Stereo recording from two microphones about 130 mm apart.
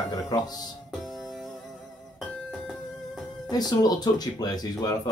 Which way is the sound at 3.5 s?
30° left (ahead or behind).